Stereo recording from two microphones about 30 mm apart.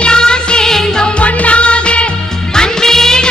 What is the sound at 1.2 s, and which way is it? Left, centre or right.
Music, left.